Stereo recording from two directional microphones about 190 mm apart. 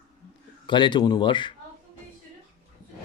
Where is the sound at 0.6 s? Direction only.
25° left (ahead or behind).